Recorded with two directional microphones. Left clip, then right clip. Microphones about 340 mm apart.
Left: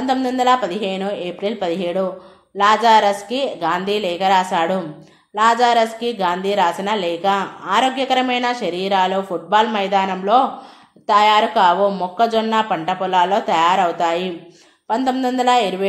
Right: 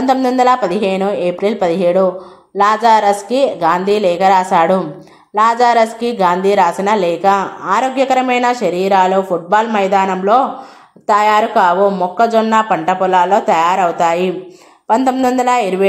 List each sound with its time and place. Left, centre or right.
0.0 s a woman's voice: right